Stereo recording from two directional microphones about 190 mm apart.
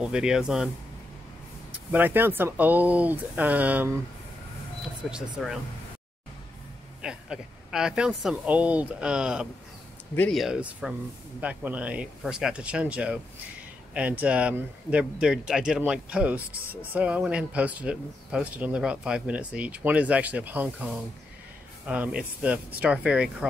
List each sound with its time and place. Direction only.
0.0 s speech: 5° right (ahead or behind)
1.9 s speech: 10° right (ahead or behind)
5.1 s speech: centre (ahead or behind)
7.0 s speech: 5° right (ahead or behind)
16.5 s speech: 50° right (ahead or behind)
16.9 s speech: 5° right (ahead or behind)